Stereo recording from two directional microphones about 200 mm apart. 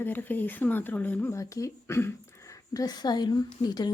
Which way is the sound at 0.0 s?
10° left (ahead or behind).